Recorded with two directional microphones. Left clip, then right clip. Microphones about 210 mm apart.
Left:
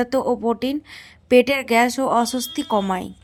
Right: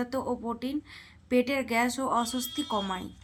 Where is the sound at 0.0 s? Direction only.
35° left (ahead or behind).